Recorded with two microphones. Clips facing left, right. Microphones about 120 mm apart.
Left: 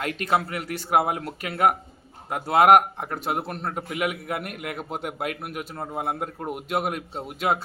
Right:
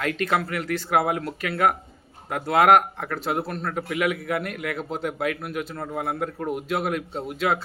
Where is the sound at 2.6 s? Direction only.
20° left (ahead or behind).